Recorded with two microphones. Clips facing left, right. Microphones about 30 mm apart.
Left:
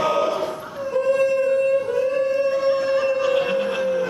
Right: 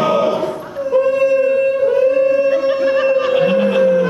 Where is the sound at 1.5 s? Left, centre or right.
Right.